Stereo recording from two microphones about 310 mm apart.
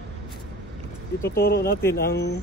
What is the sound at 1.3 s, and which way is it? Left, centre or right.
Speech, left.